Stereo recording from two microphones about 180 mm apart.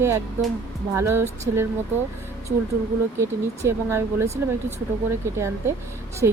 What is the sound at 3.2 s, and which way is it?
Speech, 15° right (ahead or behind).